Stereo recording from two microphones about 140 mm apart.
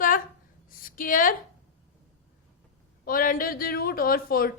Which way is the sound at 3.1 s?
90° left.